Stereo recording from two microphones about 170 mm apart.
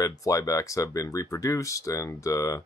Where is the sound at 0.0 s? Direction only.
20° left (ahead or behind).